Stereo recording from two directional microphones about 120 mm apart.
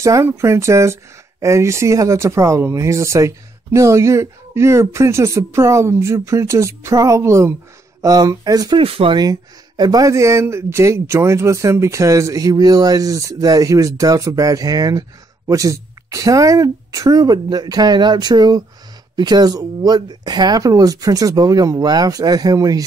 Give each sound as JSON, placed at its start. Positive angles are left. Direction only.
{"t": 0.0, "sound": "speech", "side_deg": -25}
{"t": 8.7, "sound": "speech", "side_deg": -50}
{"t": 9.1, "sound": "speech", "side_deg": -35}